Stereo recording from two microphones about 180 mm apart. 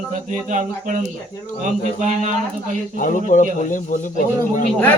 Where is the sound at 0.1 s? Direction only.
40° right (ahead or behind).